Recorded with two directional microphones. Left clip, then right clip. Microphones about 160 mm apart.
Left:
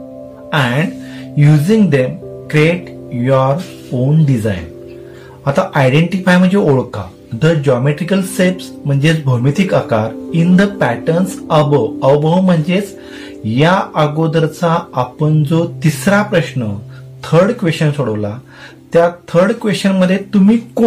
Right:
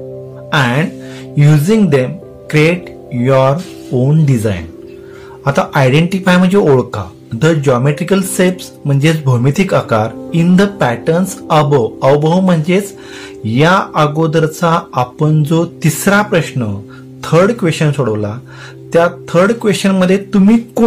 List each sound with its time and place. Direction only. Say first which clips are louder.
0.5 s music: right 2 dB; 45° right (ahead or behind)
1.3 s speech: right 1 dB; 55° right (ahead or behind)
5.4 s speech: right 1 dB; 50° right (ahead or behind)